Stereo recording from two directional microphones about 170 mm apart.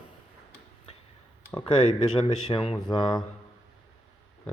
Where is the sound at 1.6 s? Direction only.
25° left (ahead or behind).